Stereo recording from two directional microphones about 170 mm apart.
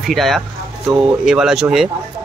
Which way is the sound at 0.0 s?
Centre (ahead or behind).